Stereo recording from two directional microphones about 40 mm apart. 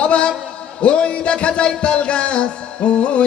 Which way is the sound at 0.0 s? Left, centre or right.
Left.